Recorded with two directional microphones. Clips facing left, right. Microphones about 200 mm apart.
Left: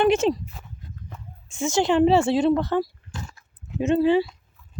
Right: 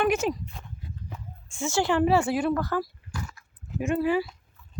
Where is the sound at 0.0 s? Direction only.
25° left (ahead or behind).